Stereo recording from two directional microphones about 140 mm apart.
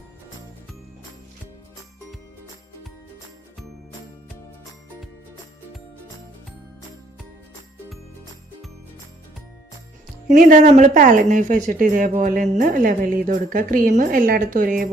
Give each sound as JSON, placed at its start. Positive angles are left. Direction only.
{"t": 10.2, "sound": "speech", "side_deg": -65}